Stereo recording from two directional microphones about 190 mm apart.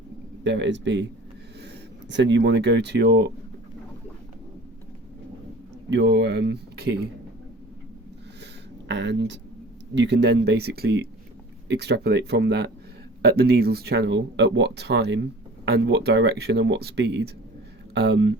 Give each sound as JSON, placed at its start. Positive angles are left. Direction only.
{"t": 0.4, "sound": "speech", "side_deg": -70}
{"t": 5.9, "sound": "speech", "side_deg": -65}
{"t": 8.9, "sound": "speech", "side_deg": -70}